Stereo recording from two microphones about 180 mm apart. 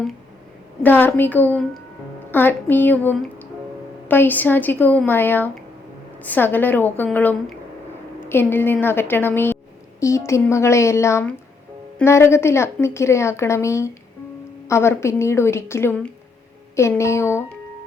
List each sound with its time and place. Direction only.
0.8 s a woman's voice: 10° left (ahead or behind)